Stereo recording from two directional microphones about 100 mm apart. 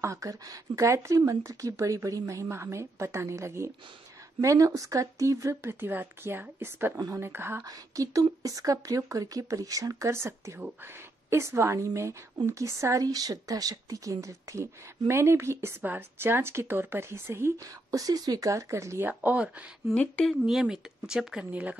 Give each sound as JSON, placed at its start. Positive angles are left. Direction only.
{"t": 0.0, "sound": "speech", "side_deg": -30}
{"t": 7.6, "sound": "speech", "side_deg": -35}
{"t": 18.0, "sound": "speech", "side_deg": -40}
{"t": 19.0, "sound": "speech", "side_deg": -10}
{"t": 19.9, "sound": "speech", "side_deg": 10}
{"t": 20.4, "sound": "speech", "side_deg": -5}